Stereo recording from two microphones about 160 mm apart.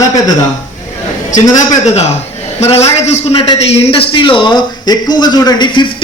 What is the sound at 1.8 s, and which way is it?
A man's voice, 45° left (ahead or behind).